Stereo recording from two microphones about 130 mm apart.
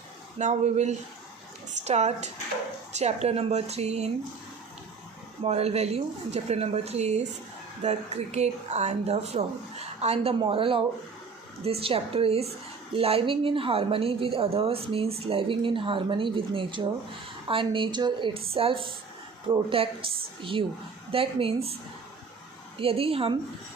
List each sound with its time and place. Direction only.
0.3 s speech: 65° right (ahead or behind)
5.4 s speech: 50° right (ahead or behind)
10.4 s a woman's voice: 45° right (ahead or behind)
22.8 s a woman's voice: 45° right (ahead or behind)